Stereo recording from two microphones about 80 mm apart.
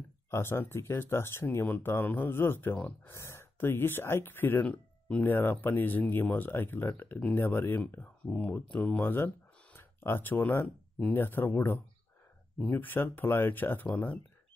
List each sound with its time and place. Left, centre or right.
0.3 s speech: left
12.5 s speech: left